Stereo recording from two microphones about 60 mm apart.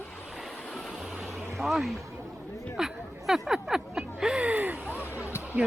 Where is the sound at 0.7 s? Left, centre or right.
Centre.